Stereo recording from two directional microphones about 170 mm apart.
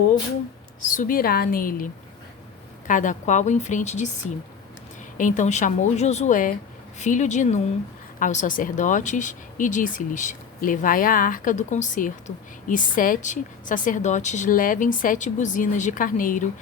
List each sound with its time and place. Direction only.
0.9 s a woman's voice: 50° left (ahead or behind)
5.1 s speech: 50° left (ahead or behind)